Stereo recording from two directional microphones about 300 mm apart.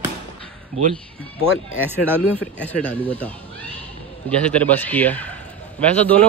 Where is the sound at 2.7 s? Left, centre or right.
Centre.